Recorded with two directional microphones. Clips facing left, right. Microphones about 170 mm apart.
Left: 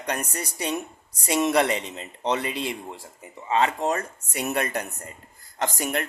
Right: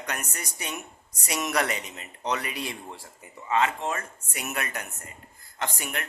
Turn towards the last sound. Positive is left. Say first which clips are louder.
# left 6 dB
turn(degrees=40)  # may be behind; listen again after turning